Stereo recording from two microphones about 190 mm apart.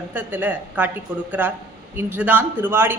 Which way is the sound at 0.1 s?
10° right (ahead or behind).